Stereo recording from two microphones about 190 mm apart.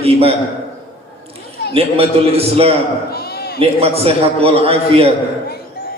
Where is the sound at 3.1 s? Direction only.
55° left (ahead or behind).